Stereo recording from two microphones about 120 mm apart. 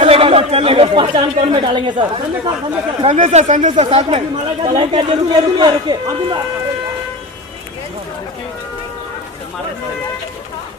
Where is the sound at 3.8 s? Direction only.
50° right (ahead or behind).